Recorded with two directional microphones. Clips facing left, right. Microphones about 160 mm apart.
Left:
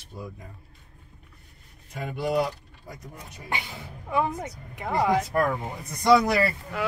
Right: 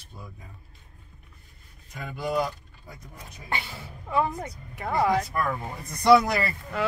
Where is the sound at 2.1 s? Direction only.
65° left (ahead or behind).